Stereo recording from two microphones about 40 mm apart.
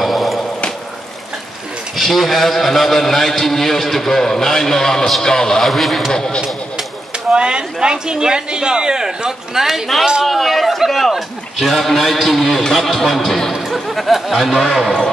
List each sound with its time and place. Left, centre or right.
0.0 s a sound: centre
2.0 s a man's voice: centre
5.7 s a man's voice: centre
6.1 s a man's voice: centre
7.2 s speech: right
10.2 s a man's voice: centre